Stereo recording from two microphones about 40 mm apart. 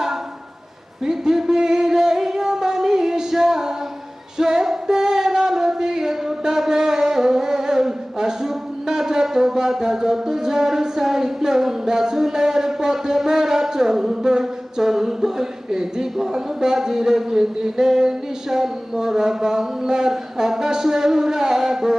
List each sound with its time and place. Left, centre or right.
1.0 s singing: centre
4.4 s a sound: centre
16.1 s speech: centre